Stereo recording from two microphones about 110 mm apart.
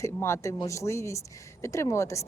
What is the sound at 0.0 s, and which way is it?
A woman's voice, 25° left (ahead or behind).